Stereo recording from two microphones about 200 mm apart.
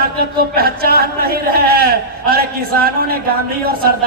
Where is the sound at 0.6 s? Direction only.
50° right (ahead or behind).